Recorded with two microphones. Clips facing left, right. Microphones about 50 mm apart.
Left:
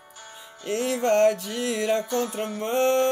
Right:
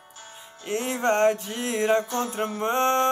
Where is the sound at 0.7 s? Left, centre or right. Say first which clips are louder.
Left 1 dB; right.